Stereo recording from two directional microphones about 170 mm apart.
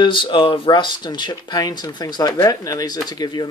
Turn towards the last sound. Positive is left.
turn(degrees=25)  # may be behind; listen again after turning